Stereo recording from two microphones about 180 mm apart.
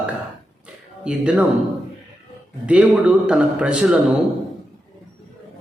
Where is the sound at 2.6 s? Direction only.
5° right (ahead or behind).